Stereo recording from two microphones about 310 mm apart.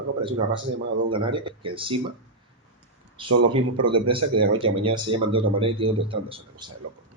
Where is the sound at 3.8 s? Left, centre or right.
Right.